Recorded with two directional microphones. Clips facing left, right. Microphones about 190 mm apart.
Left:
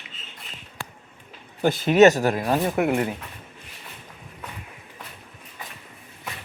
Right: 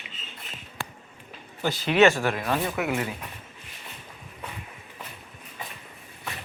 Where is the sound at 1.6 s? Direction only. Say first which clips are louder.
Left 5 dB; 50° left (ahead or behind).